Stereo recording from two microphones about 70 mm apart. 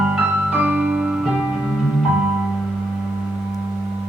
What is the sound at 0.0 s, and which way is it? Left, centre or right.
Music, centre.